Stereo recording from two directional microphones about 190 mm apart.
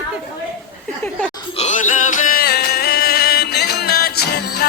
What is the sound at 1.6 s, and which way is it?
Music, 40° left (ahead or behind).